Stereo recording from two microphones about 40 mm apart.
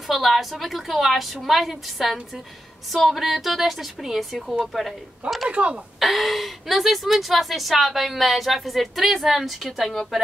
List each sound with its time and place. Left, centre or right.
0.1 s a woman's voice: centre
5.5 s speech: right
5.9 s a woman's voice: centre